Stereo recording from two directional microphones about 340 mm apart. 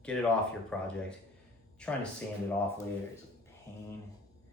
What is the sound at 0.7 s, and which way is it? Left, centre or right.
Speech, centre.